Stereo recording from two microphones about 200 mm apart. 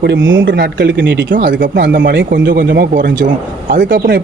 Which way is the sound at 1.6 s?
45° right (ahead or behind).